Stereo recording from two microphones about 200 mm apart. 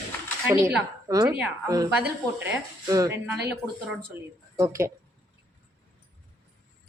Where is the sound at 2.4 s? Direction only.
15° right (ahead or behind).